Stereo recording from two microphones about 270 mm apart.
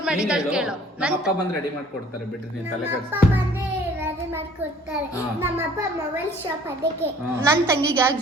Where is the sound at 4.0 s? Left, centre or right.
Centre.